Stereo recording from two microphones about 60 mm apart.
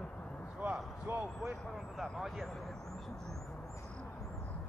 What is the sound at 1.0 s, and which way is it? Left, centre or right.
Basketball bounce, right.